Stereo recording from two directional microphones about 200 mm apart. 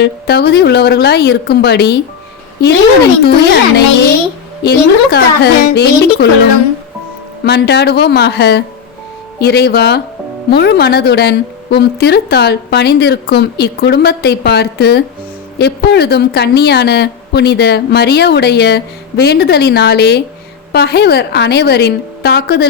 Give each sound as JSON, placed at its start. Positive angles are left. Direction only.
{"t": 0.0, "sound": "a woman's voice", "side_deg": 55}
{"t": 3.2, "sound": "speech", "side_deg": 55}
{"t": 7.4, "sound": "a woman's voice", "side_deg": 55}